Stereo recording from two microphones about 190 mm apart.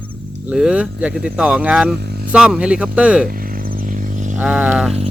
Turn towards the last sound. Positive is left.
turn(degrees=-5)  # may be behind; listen again after turning